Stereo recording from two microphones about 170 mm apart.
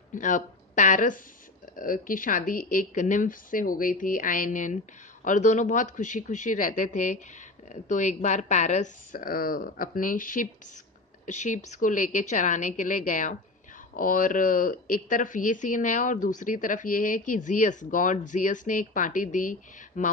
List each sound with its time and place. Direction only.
0.1 s speech: 50° left (ahead or behind)